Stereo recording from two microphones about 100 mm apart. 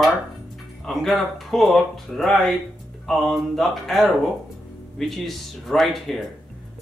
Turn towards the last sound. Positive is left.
turn(degrees=0)  # may be behind; listen again after turning